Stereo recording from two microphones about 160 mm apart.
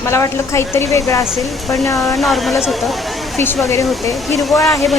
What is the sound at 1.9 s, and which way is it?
Speech, centre (ahead or behind).